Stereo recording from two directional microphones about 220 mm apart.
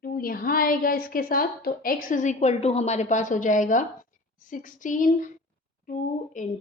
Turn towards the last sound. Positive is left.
turn(degrees=35)  # may be behind; listen again after turning